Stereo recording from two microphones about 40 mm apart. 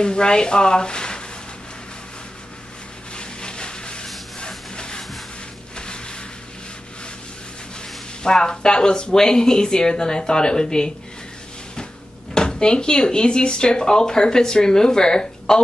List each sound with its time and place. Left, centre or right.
0.0 s speech: left
3.2 s a sound: left
8.2 s speech: centre
12.4 s speech: left